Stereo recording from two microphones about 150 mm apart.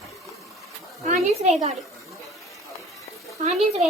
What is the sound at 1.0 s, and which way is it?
Speech, 45° right (ahead or behind).